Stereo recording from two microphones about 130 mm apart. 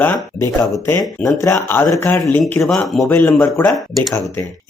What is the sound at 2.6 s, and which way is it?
Speech, 5° left (ahead or behind).